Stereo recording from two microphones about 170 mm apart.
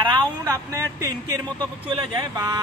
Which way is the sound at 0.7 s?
15° right (ahead or behind).